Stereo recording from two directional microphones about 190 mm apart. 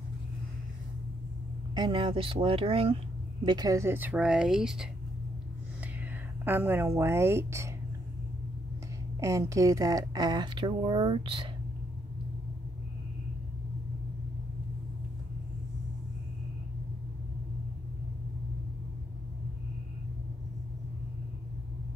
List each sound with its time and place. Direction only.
1.8 s speech: 25° right (ahead or behind)
3.4 s speech: 20° right (ahead or behind); by 4.8 s centre (ahead or behind)
6.4 s a woman's voice: 10° right (ahead or behind)
9.2 s speech: 15° right (ahead or behind)